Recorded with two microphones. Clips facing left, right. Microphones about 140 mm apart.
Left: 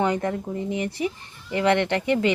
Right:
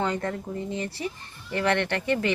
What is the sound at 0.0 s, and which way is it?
A woman's voice, 15° left (ahead or behind).